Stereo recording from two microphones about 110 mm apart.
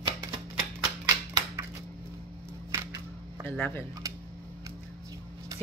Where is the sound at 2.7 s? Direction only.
25° right (ahead or behind).